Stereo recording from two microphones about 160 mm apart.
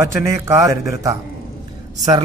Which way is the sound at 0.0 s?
15° right (ahead or behind).